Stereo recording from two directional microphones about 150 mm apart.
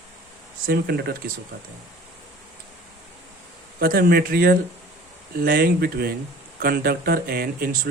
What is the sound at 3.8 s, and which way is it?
Speech, 75° right (ahead or behind).